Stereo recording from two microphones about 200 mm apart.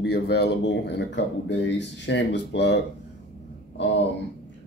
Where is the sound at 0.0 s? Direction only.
55° left (ahead or behind).